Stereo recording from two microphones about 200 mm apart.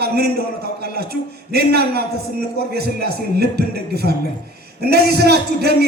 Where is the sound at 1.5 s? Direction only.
50° right (ahead or behind).